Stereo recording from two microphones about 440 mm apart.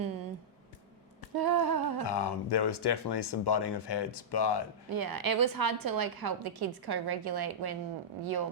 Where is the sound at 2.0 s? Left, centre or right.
Left.